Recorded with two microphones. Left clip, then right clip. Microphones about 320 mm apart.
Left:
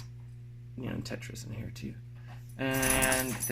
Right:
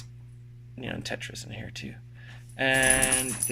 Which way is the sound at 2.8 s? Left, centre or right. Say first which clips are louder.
Even; centre.